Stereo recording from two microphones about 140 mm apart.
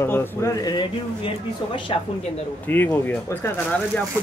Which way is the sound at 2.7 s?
15° left (ahead or behind).